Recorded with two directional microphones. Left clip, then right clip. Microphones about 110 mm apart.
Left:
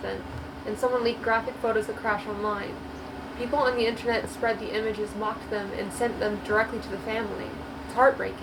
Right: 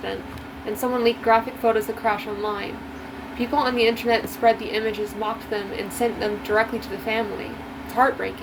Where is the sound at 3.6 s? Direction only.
55° right (ahead or behind).